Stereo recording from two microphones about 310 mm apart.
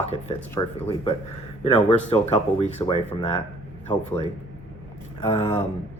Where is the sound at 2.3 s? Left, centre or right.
Centre.